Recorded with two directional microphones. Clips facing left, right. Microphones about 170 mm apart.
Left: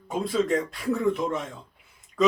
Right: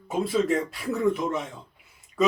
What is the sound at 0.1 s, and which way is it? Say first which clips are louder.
Speech: right 1 dB; 5° right (ahead or behind).